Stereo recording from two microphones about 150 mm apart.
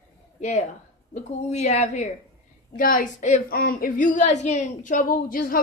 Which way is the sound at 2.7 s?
65° left (ahead or behind).